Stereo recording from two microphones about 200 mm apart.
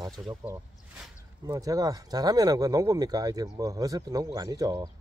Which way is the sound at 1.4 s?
20° right (ahead or behind).